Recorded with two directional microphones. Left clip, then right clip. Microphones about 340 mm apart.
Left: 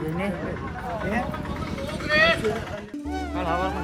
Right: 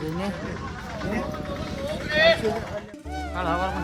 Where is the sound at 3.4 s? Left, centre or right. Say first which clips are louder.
Even; right.